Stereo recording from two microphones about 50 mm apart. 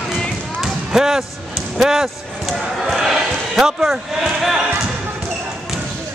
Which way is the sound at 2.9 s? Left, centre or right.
Centre.